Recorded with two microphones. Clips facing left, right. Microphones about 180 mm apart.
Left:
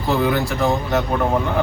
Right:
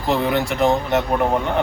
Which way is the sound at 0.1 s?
20° right (ahead or behind).